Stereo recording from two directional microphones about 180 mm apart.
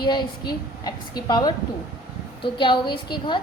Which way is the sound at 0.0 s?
25° left (ahead or behind).